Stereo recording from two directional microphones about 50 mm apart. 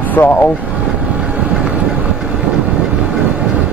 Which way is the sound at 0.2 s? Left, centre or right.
Left.